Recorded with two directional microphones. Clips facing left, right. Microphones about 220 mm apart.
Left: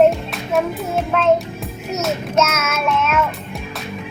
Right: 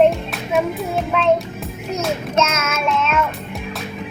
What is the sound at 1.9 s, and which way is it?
A child's voice, 5° left (ahead or behind).